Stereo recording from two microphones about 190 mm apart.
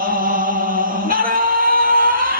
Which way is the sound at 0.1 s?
45° right (ahead or behind).